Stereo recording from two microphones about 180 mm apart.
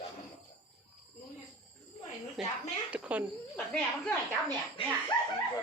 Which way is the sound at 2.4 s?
Centre (ahead or behind).